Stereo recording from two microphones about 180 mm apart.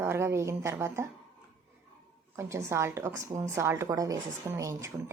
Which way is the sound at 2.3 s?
15° right (ahead or behind).